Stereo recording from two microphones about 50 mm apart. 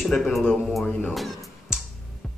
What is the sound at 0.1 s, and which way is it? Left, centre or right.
Speech, centre.